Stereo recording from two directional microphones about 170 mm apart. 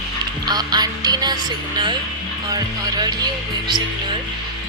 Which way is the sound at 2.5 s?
25° right (ahead or behind).